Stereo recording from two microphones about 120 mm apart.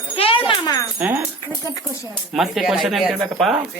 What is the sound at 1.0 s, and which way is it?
Speech, 15° right (ahead or behind).